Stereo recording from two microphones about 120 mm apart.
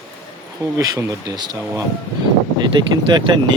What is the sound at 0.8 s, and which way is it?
Speech, 30° right (ahead or behind).